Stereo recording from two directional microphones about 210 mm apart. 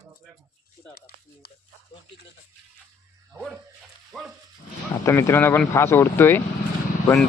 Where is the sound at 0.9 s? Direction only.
50° left (ahead or behind).